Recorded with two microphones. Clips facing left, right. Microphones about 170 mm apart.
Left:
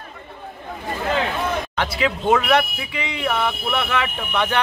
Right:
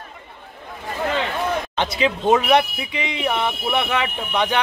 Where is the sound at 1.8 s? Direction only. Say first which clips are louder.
Right 2 dB; 20° right (ahead or behind).